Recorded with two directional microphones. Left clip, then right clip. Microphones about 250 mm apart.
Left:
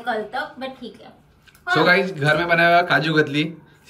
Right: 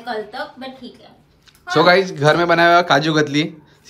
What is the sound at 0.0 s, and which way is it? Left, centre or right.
Speech, centre.